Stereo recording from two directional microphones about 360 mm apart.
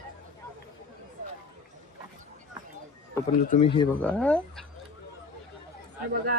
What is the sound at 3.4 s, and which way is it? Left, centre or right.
Speech, centre.